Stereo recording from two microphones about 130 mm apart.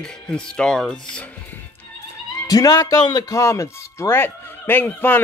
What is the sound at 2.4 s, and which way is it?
A man's voice, 30° left (ahead or behind).